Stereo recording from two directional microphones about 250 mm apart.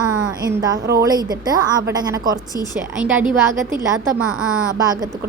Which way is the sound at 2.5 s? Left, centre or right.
Centre.